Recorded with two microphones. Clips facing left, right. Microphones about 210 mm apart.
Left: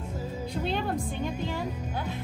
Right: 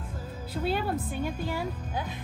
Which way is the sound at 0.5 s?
5° right (ahead or behind).